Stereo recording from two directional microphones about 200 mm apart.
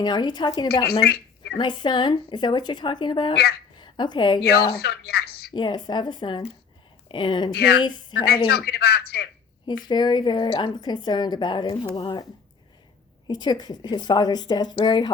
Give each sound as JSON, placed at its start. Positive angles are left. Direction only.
{"t": 0.0, "sound": "a woman's voice", "side_deg": 20}
{"t": 1.0, "sound": "a sound", "side_deg": 50}
{"t": 1.5, "sound": "a woman's voice", "side_deg": 20}
{"t": 4.4, "sound": "speech", "side_deg": 50}
{"t": 5.5, "sound": "a woman's voice", "side_deg": 20}
{"t": 7.5, "sound": "speech", "side_deg": 55}
{"t": 7.8, "sound": "a woman's voice", "side_deg": 20}
{"t": 8.1, "sound": "speech", "side_deg": 50}
{"t": 9.6, "sound": "a woman's voice", "side_deg": 20}
{"t": 13.2, "sound": "a woman's voice", "side_deg": 20}